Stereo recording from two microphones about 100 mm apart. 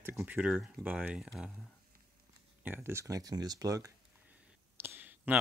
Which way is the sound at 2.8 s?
30° right (ahead or behind).